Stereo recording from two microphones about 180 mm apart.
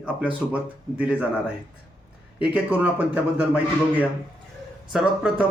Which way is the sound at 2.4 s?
10° right (ahead or behind).